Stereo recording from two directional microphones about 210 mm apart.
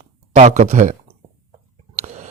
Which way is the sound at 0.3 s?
30° right (ahead or behind).